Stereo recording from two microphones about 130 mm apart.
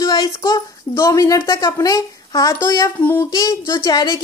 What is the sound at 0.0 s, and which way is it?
A woman's voice, 30° left (ahead or behind).